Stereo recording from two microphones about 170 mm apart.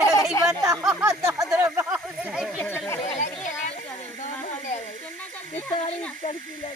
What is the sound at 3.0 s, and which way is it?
Speech, 45° left (ahead or behind).